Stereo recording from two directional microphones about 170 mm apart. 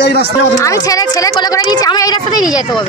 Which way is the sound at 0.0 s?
90° left.